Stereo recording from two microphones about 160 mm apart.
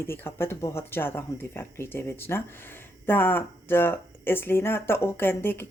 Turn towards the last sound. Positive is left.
turn(degrees=15)  # may be behind; listen again after turning